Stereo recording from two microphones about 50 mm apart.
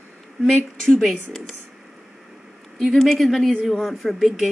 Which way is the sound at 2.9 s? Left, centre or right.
Centre.